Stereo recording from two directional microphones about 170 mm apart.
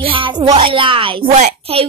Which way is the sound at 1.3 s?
40° right (ahead or behind).